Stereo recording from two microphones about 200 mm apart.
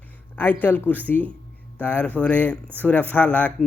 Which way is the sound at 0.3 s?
10° left (ahead or behind).